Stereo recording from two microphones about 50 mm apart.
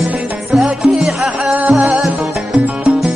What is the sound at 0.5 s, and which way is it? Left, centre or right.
Music, centre.